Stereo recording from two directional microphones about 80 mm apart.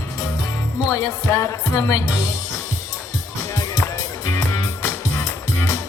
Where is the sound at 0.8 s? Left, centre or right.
Left.